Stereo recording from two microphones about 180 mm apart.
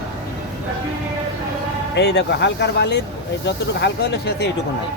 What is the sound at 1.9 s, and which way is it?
Speech, 70° left (ahead or behind).